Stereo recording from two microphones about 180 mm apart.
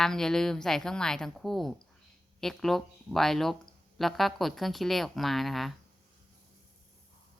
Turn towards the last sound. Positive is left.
turn(degrees=0)  # may be behind; listen again after turning